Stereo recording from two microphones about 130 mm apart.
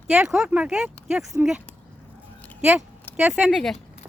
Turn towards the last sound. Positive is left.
turn(degrees=0)  # may be behind; listen again after turning